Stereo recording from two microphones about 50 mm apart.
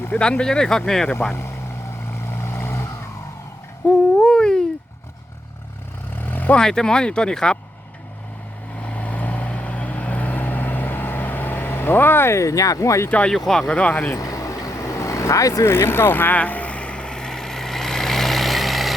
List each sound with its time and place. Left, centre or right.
0.2 s speech: centre
1.3 s speech: left
2.1 s vehicle: left
3.8 s hoot: centre
6.1 s vehicle: left
6.6 s speech: centre
8.8 s vehicle: left
13.1 s speech: left
13.3 s speech: centre
13.7 s speech: left
14.4 s vehicle: left; by 18.9 s centre